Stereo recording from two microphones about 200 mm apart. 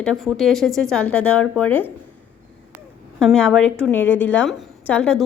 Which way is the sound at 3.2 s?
Centre (ahead or behind).